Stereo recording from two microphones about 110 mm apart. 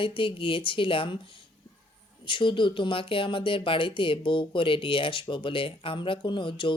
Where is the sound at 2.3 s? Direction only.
50° left (ahead or behind).